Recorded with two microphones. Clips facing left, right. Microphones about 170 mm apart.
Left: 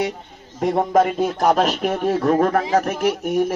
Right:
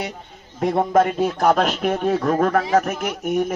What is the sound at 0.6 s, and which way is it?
A man's voice, centre (ahead or behind).